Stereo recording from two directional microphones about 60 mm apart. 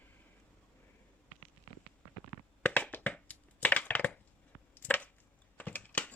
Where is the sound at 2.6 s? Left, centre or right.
Left.